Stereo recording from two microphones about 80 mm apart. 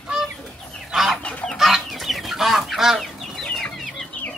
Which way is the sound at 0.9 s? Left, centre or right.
Centre.